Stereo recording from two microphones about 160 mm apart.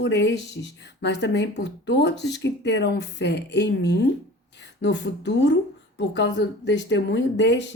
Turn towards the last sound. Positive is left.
turn(degrees=90)